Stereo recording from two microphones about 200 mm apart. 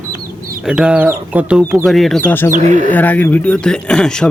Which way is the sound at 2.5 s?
40° right (ahead or behind).